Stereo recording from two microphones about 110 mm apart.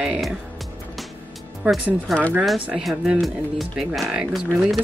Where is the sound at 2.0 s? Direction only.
5° left (ahead or behind).